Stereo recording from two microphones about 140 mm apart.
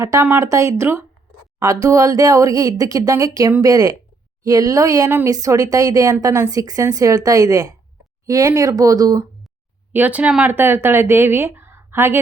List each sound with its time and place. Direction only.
0.0 s speech: 20° right (ahead or behind)
9.9 s speech: 10° right (ahead or behind)